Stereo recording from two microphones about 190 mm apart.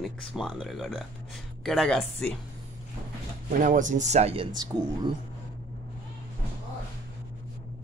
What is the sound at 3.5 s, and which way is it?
Speech, 45° right (ahead or behind).